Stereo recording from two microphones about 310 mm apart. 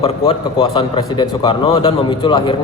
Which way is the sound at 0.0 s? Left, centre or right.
Centre.